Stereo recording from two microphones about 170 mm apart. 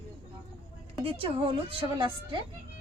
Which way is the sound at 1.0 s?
30° right (ahead or behind).